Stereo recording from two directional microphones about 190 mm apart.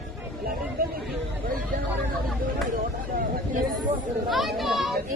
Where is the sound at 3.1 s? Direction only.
45° right (ahead or behind).